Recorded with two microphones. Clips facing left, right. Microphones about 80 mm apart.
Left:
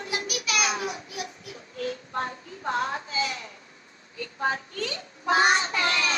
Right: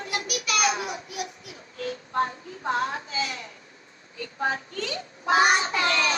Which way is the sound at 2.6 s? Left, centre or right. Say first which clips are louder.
Right 1 dB; right.